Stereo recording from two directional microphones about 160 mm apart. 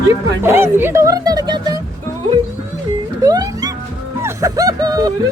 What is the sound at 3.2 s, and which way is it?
Music, 25° right (ahead or behind).